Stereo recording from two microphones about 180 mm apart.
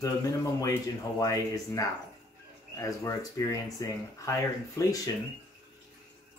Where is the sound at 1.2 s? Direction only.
20° left (ahead or behind).